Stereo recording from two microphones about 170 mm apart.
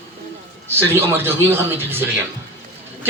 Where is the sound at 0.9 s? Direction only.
15° right (ahead or behind).